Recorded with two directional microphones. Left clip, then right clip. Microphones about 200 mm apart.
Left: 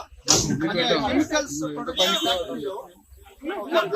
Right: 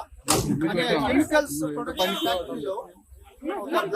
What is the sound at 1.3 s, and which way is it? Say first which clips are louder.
Speech: right 3 dB; 20° right (ahead or behind).